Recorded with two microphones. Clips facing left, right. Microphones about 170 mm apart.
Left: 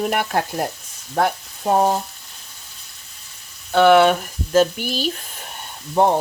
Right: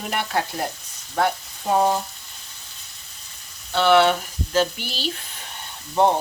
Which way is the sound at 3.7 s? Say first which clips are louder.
Left 4 dB; 50° left (ahead or behind).